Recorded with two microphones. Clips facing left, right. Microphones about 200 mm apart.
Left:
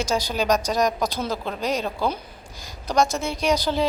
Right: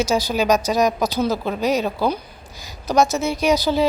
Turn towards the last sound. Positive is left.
turn(degrees=-5)  # may be behind; listen again after turning